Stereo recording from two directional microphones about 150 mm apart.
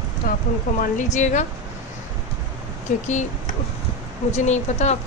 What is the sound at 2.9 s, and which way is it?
Speech, 55° left (ahead or behind).